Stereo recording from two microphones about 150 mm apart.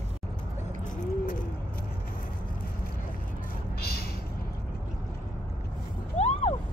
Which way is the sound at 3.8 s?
90° left.